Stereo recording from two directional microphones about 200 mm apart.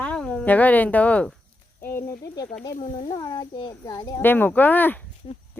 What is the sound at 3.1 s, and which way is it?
Speech, 20° left (ahead or behind).